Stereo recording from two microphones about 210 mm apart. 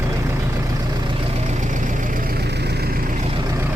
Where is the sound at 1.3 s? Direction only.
35° right (ahead or behind).